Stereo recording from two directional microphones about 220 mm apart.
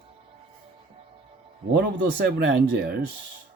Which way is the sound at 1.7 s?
45° right (ahead or behind).